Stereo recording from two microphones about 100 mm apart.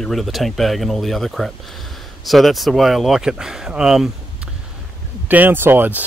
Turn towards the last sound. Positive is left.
turn(degrees=-20)  # may be behind; listen again after turning